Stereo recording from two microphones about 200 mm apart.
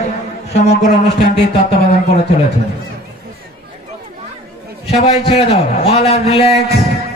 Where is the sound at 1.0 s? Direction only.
55° left (ahead or behind).